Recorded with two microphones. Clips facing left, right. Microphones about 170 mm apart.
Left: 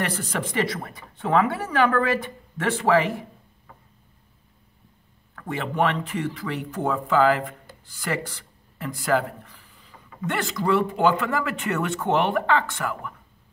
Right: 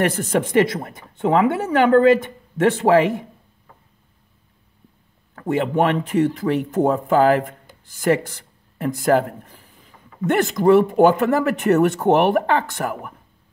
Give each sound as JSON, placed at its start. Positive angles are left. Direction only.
{"t": 0.0, "sound": "speech", "side_deg": -50}
{"t": 0.7, "sound": "speech", "side_deg": -20}
{"t": 2.9, "sound": "speech", "side_deg": -45}
{"t": 5.3, "sound": "speech", "side_deg": -45}
{"t": 8.7, "sound": "speech", "side_deg": -50}